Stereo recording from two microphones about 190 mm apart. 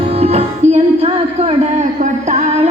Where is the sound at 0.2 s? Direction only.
35° right (ahead or behind).